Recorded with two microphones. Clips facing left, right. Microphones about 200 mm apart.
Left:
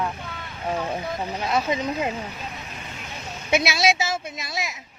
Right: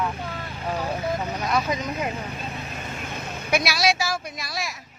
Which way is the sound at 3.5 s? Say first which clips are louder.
Left 2 dB; 25° left (ahead or behind).